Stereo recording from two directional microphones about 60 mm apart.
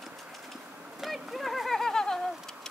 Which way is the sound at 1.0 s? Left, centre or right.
Centre.